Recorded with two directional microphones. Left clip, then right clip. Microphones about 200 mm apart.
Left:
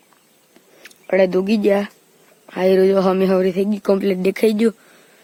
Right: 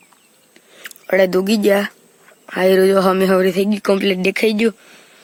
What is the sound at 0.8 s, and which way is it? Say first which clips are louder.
Speech: right 1 dB; centre (ahead or behind).